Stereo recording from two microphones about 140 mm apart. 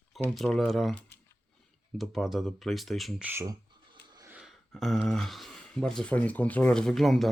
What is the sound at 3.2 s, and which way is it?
Speech, 20° right (ahead or behind).